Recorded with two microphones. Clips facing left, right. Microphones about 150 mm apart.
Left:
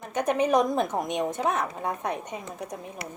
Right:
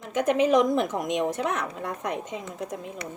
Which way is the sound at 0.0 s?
90° right.